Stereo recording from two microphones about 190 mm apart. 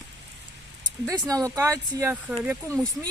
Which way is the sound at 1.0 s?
20° right (ahead or behind).